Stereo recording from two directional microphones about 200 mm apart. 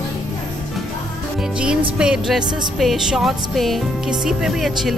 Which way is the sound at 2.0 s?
5° right (ahead or behind).